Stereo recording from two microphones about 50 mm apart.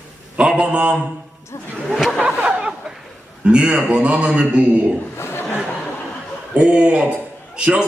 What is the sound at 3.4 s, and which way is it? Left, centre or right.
Speech, right.